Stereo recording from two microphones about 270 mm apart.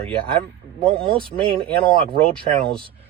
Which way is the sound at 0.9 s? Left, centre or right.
Centre.